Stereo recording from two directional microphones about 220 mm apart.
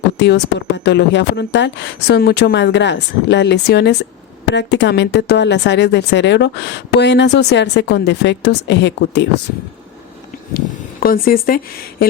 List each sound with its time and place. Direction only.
0.2 s speech: 50° left (ahead or behind)
11.0 s speech: 40° left (ahead or behind)